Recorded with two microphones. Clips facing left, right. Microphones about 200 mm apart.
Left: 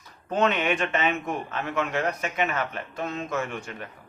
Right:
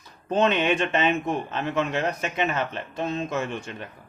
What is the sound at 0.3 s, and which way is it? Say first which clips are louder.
Speech: right 2 dB; 30° right (ahead or behind).